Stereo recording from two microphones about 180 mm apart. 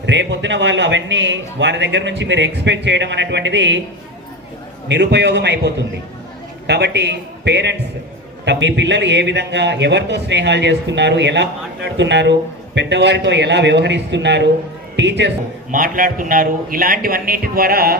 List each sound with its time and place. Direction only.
0.0 s a man's voice: 80° right
4.9 s a man's voice: 70° right (ahead or behind)
15.7 s a man's voice: 50° right (ahead or behind)